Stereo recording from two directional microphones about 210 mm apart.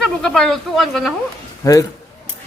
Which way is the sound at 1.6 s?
15° left (ahead or behind).